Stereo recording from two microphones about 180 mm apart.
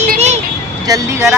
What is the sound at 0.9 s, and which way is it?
Speech, 15° right (ahead or behind).